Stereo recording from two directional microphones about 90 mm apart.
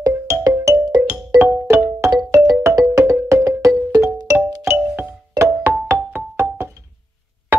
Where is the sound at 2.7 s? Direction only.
35° right (ahead or behind).